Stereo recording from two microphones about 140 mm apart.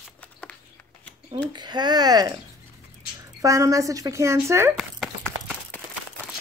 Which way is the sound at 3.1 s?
25° right (ahead or behind).